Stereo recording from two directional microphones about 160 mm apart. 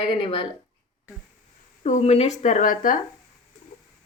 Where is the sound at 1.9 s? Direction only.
40° left (ahead or behind); by 3.0 s 60° left (ahead or behind).